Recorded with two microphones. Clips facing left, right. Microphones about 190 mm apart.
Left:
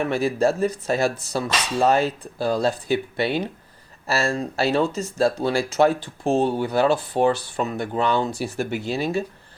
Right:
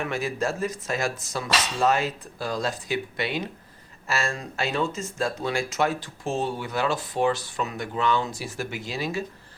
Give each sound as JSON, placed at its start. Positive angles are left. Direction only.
{"t": 0.1, "sound": "speech", "side_deg": 35}
{"t": 8.3, "sound": "speech", "side_deg": 65}